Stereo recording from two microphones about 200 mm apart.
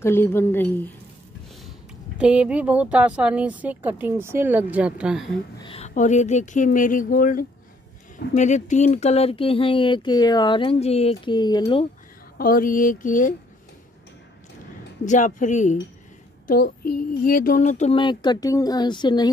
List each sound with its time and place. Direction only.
0.0 s a woman's voice: 10° left (ahead or behind)
2.1 s speech: 5° right (ahead or behind)
5.6 s speech: 30° left (ahead or behind)
12.4 s speech: 45° left (ahead or behind)
15.0 s speech: 40° left (ahead or behind); by 19.3 s 20° left (ahead or behind)